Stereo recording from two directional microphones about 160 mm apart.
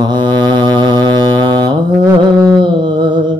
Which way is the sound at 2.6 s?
30° right (ahead or behind).